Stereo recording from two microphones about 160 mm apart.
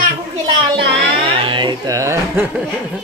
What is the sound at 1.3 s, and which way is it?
Speech, 30° right (ahead or behind).